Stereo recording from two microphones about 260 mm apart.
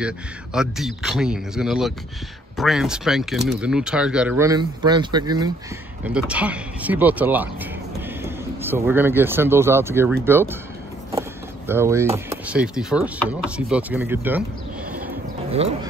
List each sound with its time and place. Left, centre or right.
0.0 s speech: centre
6.0 s speech: centre
11.1 s vehicle: centre
12.3 s speech: centre
15.5 s speech: right